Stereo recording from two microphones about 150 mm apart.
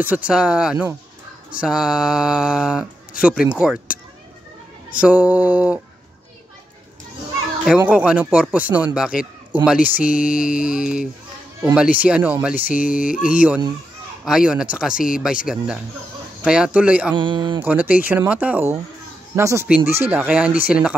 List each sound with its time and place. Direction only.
0.0 s speech: 10° right (ahead or behind)
4.9 s speech: 10° right (ahead or behind)
7.6 s speech: 5° right (ahead or behind)
10.0 s a sound: 65° left (ahead or behind)
10.3 s speech: 5° right (ahead or behind)
17.1 s speech: 35° right (ahead or behind)
17.6 s speech: 10° right (ahead or behind)